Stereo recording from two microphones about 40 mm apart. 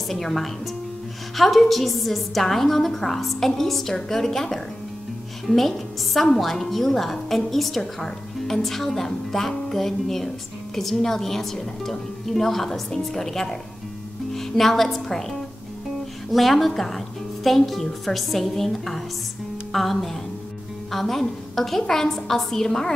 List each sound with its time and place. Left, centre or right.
0.1 s a woman's voice: centre
16.3 s a woman's voice: centre